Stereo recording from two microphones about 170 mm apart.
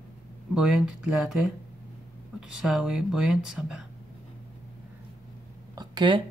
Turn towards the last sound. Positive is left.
turn(degrees=-25)  # may be behind; listen again after turning